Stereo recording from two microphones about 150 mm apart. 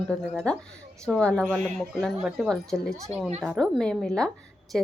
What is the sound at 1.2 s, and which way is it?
Speech, 5° left (ahead or behind).